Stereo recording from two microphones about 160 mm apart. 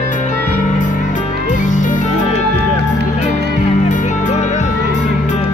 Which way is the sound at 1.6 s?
50° left (ahead or behind).